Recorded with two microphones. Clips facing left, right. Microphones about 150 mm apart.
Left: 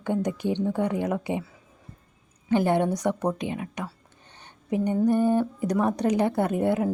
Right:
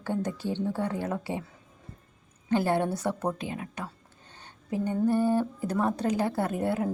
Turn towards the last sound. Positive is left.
turn(degrees=20)  # may be behind; listen again after turning